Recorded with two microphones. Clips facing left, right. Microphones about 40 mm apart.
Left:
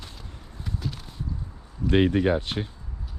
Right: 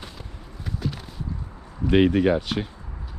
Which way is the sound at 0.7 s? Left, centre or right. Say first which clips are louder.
Right 4 dB; centre.